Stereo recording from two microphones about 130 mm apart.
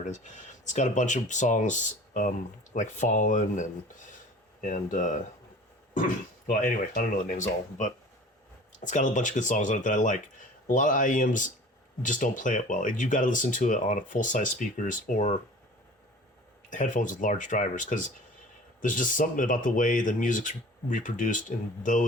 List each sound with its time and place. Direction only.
0.1 s speech: 65° left (ahead or behind)
5.9 s speech: 90° left
16.6 s speech: 80° left
18.8 s speech: 90° left